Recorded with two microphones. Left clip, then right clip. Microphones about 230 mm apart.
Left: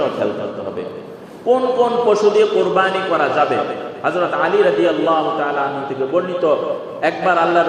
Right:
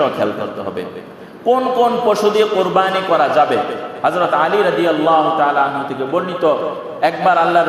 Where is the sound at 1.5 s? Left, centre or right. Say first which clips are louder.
Right 1 dB; right.